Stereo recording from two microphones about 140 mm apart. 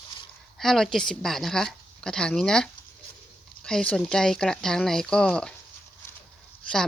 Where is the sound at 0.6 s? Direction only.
5° left (ahead or behind).